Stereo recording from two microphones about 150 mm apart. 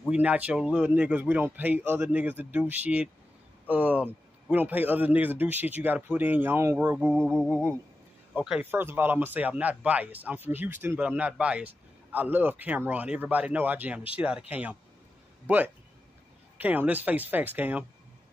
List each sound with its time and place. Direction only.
0.1 s speech: 10° right (ahead or behind)
7.1 s a sound: centre (ahead or behind)
8.4 s a man's voice: 10° right (ahead or behind)